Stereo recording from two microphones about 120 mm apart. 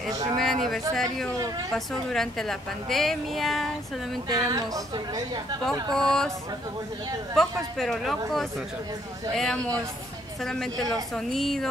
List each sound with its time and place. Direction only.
0.4 s a woman's voice: centre (ahead or behind)
4.3 s a woman's voice: 30° right (ahead or behind)
5.9 s a woman's voice: 5° left (ahead or behind)
7.3 s a woman's voice: 5° left (ahead or behind)
10.4 s a woman's voice: 5° left (ahead or behind)